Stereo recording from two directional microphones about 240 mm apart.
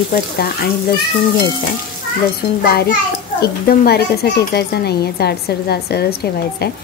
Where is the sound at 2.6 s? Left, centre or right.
Left.